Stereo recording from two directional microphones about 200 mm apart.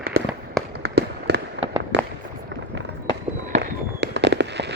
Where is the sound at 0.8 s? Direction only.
55° right (ahead or behind).